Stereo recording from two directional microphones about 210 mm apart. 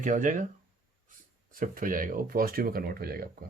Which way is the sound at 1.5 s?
40° right (ahead or behind).